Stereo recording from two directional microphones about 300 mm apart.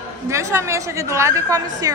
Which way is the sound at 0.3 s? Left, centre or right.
Centre.